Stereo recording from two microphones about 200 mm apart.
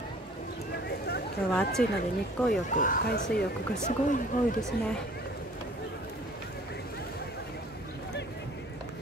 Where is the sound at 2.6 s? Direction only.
40° left (ahead or behind).